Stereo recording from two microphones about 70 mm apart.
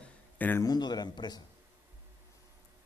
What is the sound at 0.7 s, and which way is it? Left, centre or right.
Speech, left.